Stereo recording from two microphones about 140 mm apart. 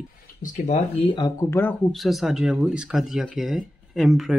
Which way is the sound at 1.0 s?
35° left (ahead or behind).